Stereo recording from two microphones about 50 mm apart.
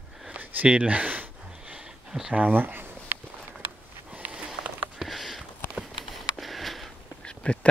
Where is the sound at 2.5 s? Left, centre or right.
Right.